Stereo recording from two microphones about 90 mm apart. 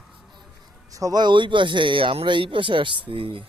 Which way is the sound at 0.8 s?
40° right (ahead or behind).